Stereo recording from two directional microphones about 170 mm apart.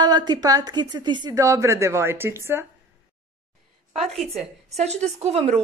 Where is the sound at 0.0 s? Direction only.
25° right (ahead or behind).